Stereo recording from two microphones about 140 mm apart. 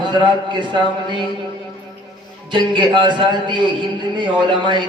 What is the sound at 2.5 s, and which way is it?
A man's voice, 35° right (ahead or behind).